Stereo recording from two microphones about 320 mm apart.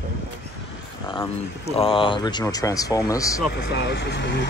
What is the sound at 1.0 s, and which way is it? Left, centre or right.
Speech, centre.